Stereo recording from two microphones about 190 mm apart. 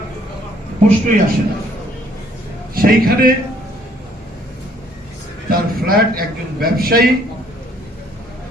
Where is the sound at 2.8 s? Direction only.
50° right (ahead or behind).